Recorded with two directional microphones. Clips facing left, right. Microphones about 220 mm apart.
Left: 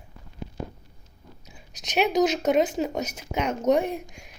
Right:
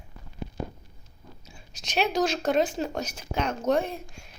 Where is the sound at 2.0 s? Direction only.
20° left (ahead or behind).